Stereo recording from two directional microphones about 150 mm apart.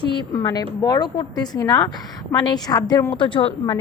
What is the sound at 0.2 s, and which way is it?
A woman's voice, 30° left (ahead or behind).